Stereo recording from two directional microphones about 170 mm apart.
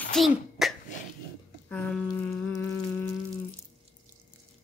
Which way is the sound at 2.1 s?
5° left (ahead or behind).